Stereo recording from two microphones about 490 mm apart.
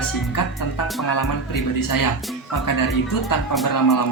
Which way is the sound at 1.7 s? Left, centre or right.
Left.